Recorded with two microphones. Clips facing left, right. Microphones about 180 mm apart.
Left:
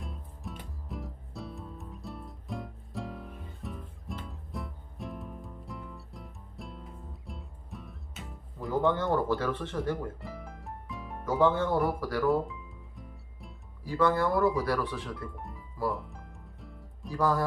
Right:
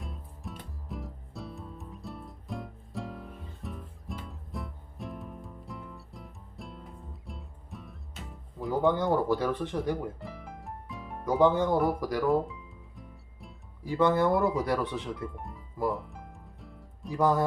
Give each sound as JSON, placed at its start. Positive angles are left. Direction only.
{"t": 0.0, "sound": "music", "side_deg": 0}
{"t": 8.8, "sound": "speech", "side_deg": -15}
{"t": 10.2, "sound": "music", "side_deg": 0}
{"t": 11.3, "sound": "speech", "side_deg": -15}
{"t": 13.8, "sound": "speech", "side_deg": -20}
{"t": 15.9, "sound": "music", "side_deg": 0}
{"t": 17.1, "sound": "speech", "side_deg": -20}